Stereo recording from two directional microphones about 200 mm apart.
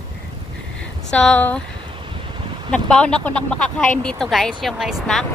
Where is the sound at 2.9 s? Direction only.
5° left (ahead or behind).